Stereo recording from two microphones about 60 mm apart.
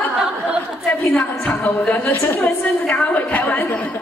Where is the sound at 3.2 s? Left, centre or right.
Left.